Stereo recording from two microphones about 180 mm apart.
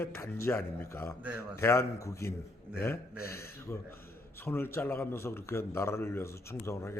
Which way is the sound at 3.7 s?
15° left (ahead or behind).